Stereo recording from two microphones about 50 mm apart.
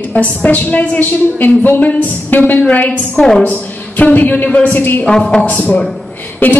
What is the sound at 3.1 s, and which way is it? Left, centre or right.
Speech, centre.